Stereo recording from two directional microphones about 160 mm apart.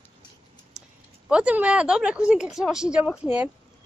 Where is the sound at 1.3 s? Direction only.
10° right (ahead or behind).